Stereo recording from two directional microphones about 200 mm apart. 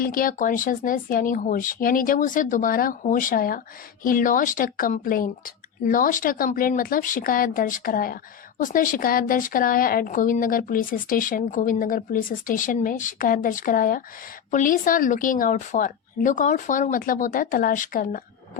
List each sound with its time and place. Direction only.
0.0 s speech: 45° left (ahead or behind)